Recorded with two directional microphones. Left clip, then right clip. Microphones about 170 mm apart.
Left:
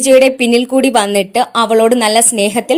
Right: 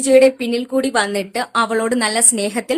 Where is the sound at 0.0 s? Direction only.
40° left (ahead or behind).